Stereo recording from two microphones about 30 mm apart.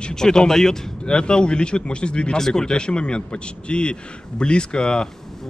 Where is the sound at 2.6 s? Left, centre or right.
Left.